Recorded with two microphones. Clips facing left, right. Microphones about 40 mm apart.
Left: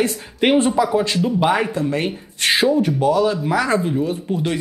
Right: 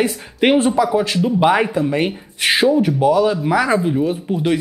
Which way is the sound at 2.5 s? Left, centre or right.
Centre.